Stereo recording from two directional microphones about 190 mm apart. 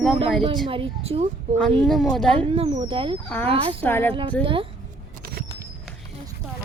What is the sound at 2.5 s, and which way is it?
Speech, 30° right (ahead or behind).